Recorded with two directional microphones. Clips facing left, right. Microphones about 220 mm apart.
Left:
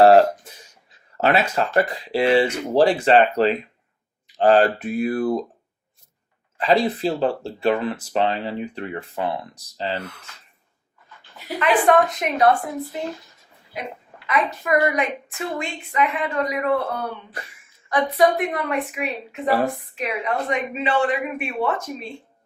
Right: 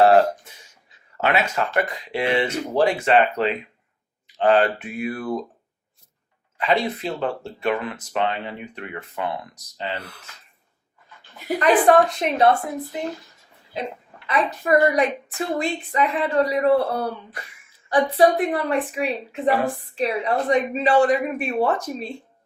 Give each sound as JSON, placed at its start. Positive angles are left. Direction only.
{"t": 0.0, "sound": "cough", "side_deg": 35}
{"t": 1.1, "sound": "speech", "side_deg": 35}
{"t": 6.6, "sound": "speech", "side_deg": 35}
{"t": 11.3, "sound": "a woman's voice", "side_deg": -40}
{"t": 14.3, "sound": "a woman's voice", "side_deg": -30}